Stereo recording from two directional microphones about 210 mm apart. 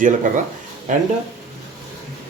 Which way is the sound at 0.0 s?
40° right (ahead or behind).